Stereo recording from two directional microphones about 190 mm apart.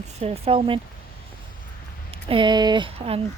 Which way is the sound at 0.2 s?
30° right (ahead or behind).